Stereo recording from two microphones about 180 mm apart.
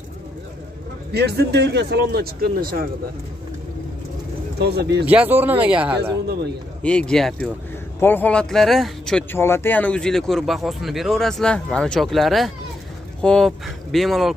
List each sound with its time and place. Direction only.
1.1 s speech: 65° right (ahead or behind)
4.6 s speech: 65° right (ahead or behind)
5.0 s speech: 10° right (ahead or behind)
6.8 s speech: 5° left (ahead or behind)